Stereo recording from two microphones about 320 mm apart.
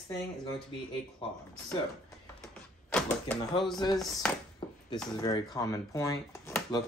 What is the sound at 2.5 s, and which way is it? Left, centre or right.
Door, centre.